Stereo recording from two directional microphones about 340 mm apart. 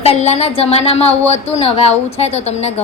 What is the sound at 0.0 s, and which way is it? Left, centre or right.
A woman's voice, centre.